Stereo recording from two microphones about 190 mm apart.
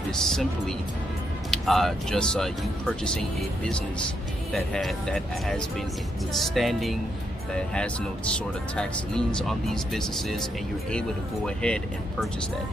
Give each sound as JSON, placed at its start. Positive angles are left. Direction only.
{"t": 0.1, "sound": "speech", "side_deg": 0}
{"t": 8.7, "sound": "speech", "side_deg": 5}